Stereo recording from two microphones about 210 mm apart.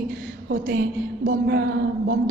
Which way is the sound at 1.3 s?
50° right (ahead or behind).